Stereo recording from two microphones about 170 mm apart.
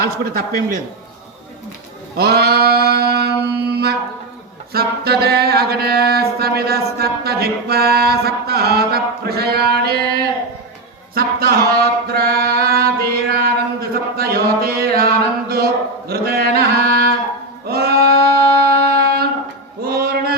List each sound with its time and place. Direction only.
0.0 s a man's voice: 65° right (ahead or behind)
2.1 s mantra: 70° right (ahead or behind)
11.1 s a sound: 60° right (ahead or behind)
17.7 s singing: 65° right (ahead or behind)
18.3 s music: 65° right (ahead or behind)
19.8 s mantra: 60° right (ahead or behind)